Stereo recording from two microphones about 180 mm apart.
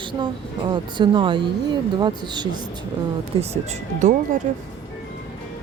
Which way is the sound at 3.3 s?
30° right (ahead or behind).